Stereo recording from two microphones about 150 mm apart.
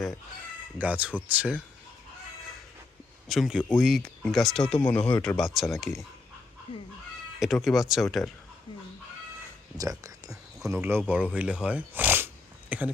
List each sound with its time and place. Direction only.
0.8 s speech: 10° right (ahead or behind)
3.2 s speech: centre (ahead or behind)
7.3 s speech: centre (ahead or behind)
9.7 s speech: 25° right (ahead or behind)